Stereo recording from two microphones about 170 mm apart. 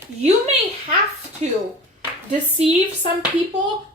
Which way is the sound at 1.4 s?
45° right (ahead or behind).